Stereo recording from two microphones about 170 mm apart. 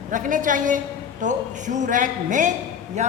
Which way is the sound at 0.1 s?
50° right (ahead or behind).